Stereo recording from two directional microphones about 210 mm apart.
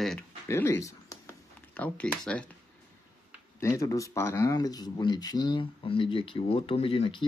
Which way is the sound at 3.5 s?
15° left (ahead or behind).